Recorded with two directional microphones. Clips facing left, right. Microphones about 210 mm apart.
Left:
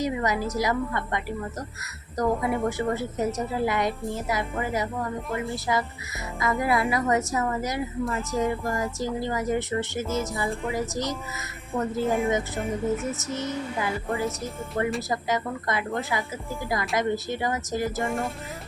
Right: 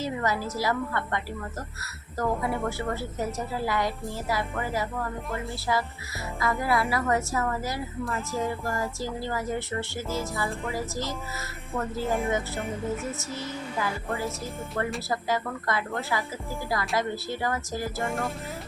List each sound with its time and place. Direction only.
0.0 s a woman's voice: 15° left (ahead or behind)
2.4 s a woman's voice: 15° left (ahead or behind)
8.0 s speech: centre (ahead or behind)
8.4 s a woman's voice: 15° left (ahead or behind)
12.0 s speech: centre (ahead or behind)
13.2 s a woman's voice: 20° left (ahead or behind)
18.0 s speech: centre (ahead or behind)